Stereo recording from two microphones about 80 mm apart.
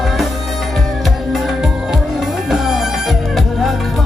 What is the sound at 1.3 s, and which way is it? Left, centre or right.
Music, centre.